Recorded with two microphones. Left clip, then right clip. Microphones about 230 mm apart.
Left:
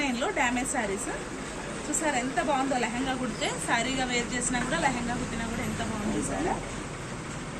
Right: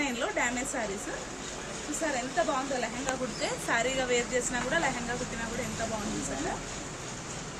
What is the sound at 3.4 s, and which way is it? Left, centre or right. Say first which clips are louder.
Speech: left 1 dB; right.